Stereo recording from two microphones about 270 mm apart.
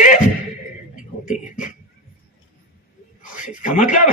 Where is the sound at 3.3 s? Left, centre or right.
Left.